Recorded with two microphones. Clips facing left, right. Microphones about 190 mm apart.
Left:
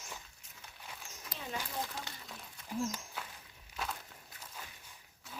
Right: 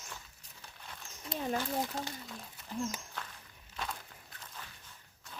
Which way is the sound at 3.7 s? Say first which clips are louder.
Even; 5° left (ahead or behind).